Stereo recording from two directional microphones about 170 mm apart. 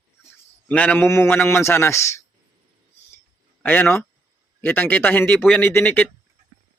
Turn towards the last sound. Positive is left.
turn(degrees=10)  # may be behind; listen again after turning